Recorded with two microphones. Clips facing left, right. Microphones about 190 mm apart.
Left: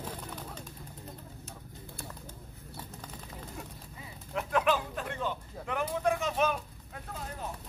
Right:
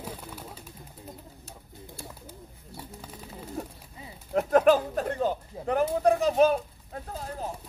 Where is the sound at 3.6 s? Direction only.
40° right (ahead or behind).